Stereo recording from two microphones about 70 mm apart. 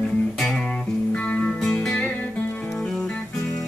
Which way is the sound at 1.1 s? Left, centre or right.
Centre.